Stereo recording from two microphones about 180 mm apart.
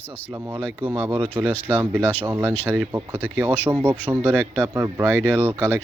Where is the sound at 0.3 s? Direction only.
10° right (ahead or behind).